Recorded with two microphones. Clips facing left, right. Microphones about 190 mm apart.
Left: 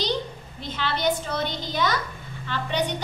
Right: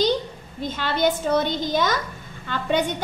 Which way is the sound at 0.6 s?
45° right (ahead or behind).